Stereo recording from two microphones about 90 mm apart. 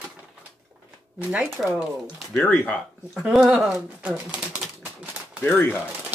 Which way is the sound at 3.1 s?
5° right (ahead or behind).